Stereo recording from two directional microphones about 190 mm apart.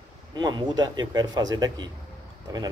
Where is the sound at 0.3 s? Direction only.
20° right (ahead or behind).